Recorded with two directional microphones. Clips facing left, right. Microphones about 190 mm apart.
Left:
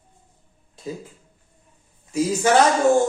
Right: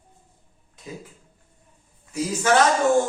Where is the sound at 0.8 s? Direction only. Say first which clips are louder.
Left 8 dB; 30° left (ahead or behind).